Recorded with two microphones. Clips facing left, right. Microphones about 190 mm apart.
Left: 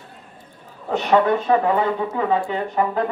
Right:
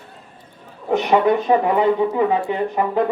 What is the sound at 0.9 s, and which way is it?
Speech, 15° right (ahead or behind).